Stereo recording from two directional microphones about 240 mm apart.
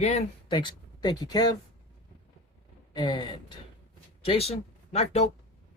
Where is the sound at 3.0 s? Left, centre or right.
Centre.